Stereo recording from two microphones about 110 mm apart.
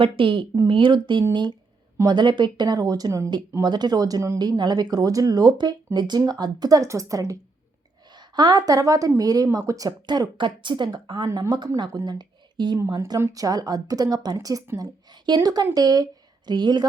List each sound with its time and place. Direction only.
0.0 s a woman's voice: 50° right (ahead or behind); by 4.4 s 30° right (ahead or behind)
4.4 s a woman's voice: 40° right (ahead or behind)
13.1 s a woman's voice: 30° right (ahead or behind)